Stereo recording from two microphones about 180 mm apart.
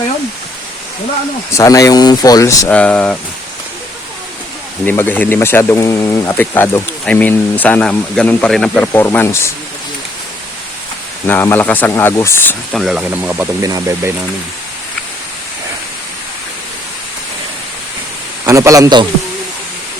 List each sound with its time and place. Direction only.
1.5 s speech: 15° left (ahead or behind)
2.7 s speech: 5° left (ahead or behind)
4.9 s speech: 10° left (ahead or behind)
11.3 s speech: 10° left (ahead or behind)
12.7 s a man's voice: centre (ahead or behind); by 14.1 s 20° right (ahead or behind)
18.4 s a man's voice: 15° right (ahead or behind)